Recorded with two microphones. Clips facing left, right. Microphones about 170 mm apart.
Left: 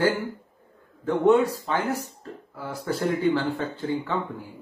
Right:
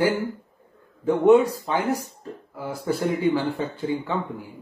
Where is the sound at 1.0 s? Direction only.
15° right (ahead or behind).